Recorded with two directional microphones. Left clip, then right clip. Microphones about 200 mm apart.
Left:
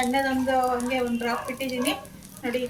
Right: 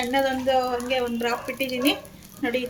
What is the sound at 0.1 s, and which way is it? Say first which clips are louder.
Speech: right 2 dB; 55° right (ahead or behind).